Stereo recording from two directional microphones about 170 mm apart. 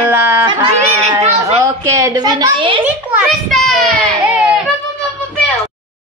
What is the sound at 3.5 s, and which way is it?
Child singing, centre (ahead or behind).